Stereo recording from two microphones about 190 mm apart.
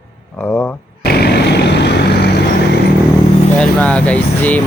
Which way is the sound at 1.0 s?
60° left (ahead or behind).